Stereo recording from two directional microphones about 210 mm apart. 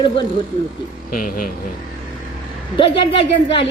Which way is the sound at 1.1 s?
40° left (ahead or behind).